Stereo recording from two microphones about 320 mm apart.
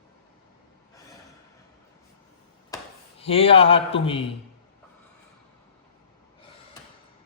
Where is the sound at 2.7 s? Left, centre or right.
Centre.